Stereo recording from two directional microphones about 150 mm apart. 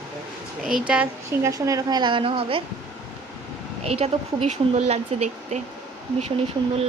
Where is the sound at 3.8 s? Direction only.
45° right (ahead or behind).